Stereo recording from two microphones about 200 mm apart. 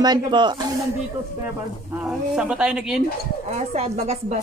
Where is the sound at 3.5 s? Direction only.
35° right (ahead or behind).